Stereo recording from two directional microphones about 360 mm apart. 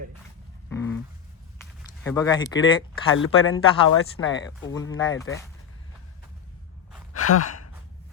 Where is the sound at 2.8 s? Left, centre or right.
Left.